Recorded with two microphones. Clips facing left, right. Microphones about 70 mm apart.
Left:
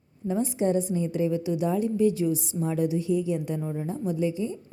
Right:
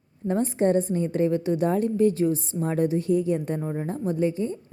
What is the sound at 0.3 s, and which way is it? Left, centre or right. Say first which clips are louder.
A woman's voice: right 3 dB; right.